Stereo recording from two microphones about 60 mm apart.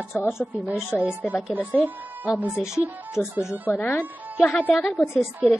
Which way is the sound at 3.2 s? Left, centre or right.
Left.